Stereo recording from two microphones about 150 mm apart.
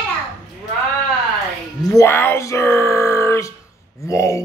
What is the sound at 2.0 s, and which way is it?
Speech, 15° left (ahead or behind).